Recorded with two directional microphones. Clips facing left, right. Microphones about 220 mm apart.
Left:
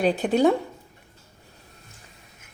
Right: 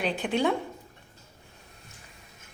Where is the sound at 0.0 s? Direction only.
40° left (ahead or behind).